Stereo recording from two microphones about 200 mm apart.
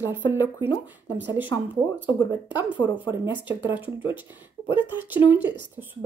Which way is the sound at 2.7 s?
25° left (ahead or behind).